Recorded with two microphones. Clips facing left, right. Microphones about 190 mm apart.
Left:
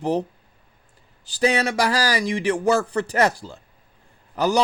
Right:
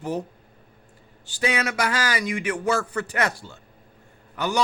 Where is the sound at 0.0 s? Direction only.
35° left (ahead or behind).